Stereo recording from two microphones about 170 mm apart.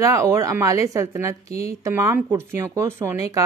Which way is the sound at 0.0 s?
20° right (ahead or behind).